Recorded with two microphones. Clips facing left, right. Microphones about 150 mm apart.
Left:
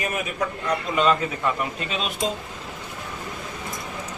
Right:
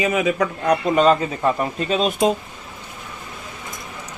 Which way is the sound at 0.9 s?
40° right (ahead or behind).